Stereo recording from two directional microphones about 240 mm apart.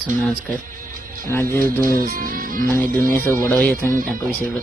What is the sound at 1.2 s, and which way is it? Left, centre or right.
Speech, centre.